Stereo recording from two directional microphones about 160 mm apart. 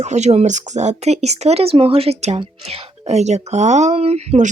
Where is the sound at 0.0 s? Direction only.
45° right (ahead or behind).